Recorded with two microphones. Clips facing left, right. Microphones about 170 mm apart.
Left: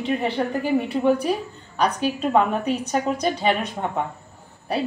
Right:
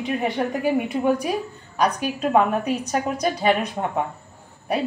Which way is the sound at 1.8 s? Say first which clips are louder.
Even; 10° right (ahead or behind).